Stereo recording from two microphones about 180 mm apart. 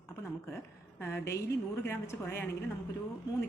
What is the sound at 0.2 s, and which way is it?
A woman's voice, 15° left (ahead or behind).